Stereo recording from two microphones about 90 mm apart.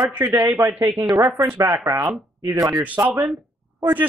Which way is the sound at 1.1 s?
45° right (ahead or behind).